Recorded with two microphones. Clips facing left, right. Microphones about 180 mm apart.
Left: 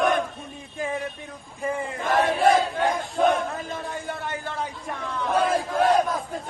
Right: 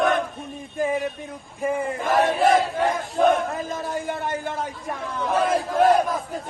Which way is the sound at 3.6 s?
40° right (ahead or behind).